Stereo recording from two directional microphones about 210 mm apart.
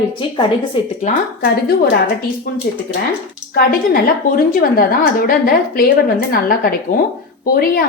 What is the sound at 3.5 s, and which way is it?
A woman's voice, 45° left (ahead or behind).